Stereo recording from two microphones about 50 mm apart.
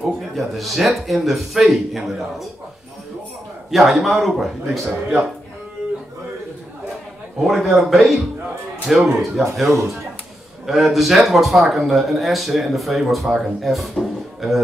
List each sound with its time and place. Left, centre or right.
0.0 s speech: centre
3.7 s speech: centre
7.4 s speech: centre
9.7 s speech: right
10.7 s speech: centre